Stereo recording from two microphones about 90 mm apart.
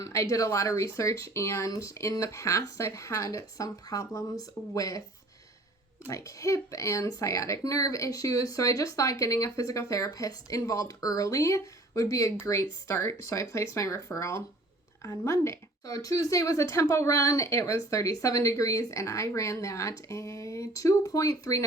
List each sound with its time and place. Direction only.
0.0 s speech: 35° left (ahead or behind)
6.1 s speech: 35° left (ahead or behind)